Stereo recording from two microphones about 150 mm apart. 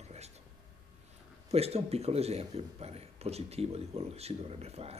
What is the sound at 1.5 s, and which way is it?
Speech, 45° right (ahead or behind).